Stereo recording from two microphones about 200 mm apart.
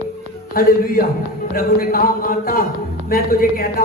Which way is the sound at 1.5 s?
45° left (ahead or behind).